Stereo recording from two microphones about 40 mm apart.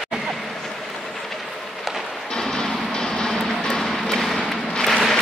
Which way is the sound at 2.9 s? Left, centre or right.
Centre.